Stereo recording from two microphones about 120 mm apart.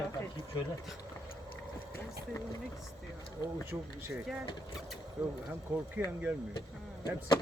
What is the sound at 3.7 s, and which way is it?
Speech, 20° right (ahead or behind).